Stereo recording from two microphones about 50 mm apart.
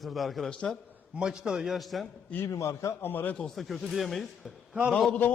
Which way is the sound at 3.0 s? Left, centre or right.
Left.